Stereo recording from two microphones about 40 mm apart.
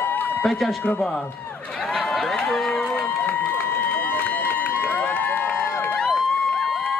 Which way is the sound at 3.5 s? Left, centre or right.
Left.